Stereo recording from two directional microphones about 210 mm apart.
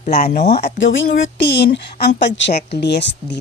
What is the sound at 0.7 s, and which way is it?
Speech, 60° left (ahead or behind).